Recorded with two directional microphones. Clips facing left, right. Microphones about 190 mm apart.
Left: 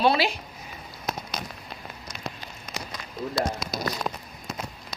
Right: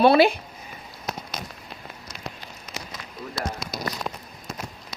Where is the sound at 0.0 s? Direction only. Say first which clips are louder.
Right 6 dB; 55° right (ahead or behind).